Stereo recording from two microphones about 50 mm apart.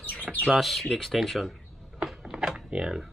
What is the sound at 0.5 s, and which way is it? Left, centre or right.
Speech, centre.